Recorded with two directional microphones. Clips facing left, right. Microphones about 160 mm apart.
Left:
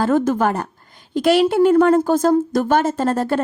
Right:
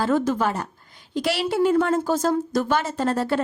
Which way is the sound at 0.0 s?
50° left (ahead or behind).